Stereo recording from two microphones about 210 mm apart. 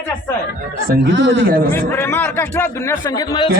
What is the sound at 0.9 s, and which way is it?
Speech, 55° right (ahead or behind).